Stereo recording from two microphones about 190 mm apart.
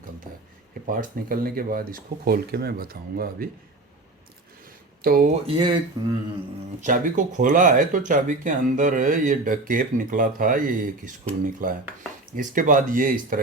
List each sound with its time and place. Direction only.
0.9 s speech: 50° right (ahead or behind)
5.0 s speech: 45° right (ahead or behind)
5.5 s speech: 25° right (ahead or behind)
6.8 s speech: 45° right (ahead or behind)